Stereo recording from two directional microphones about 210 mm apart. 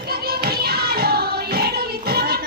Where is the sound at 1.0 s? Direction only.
50° right (ahead or behind).